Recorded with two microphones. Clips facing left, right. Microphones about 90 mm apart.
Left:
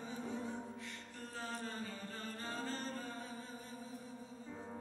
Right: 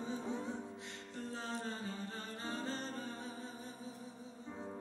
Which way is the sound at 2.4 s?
20° right (ahead or behind).